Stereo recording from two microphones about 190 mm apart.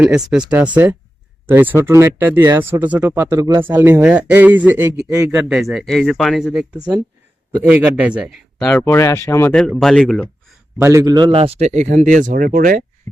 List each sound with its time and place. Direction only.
0.0 s speech: 5° right (ahead or behind)
5.3 s speech: 5° right (ahead or behind); by 9.5 s 15° left (ahead or behind)
9.5 s speech: 5° left (ahead or behind)
10.8 s speech: 15° right (ahead or behind); by 12.8 s 45° right (ahead or behind)